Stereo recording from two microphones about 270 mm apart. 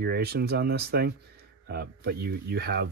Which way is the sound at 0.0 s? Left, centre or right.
Right.